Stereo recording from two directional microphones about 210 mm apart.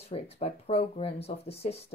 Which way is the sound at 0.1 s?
30° left (ahead or behind).